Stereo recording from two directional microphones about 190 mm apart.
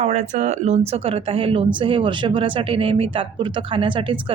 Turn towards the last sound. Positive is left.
turn(degrees=-25)  # may be behind; listen again after turning